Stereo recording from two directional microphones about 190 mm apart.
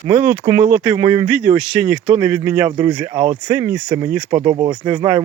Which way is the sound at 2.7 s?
25° right (ahead or behind).